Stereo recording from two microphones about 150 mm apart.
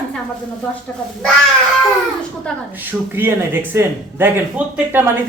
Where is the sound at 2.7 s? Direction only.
15° right (ahead or behind).